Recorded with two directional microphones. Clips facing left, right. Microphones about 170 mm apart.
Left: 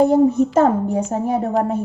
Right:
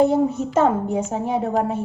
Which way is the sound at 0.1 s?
40° left (ahead or behind).